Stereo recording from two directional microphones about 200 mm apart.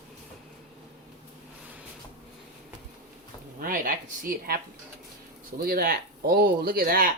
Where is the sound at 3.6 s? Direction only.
45° right (ahead or behind).